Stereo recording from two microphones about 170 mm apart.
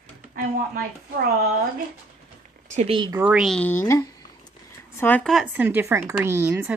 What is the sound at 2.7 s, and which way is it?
Speech, 35° right (ahead or behind).